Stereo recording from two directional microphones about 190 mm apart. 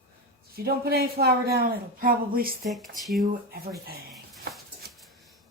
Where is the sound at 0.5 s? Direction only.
55° right (ahead or behind).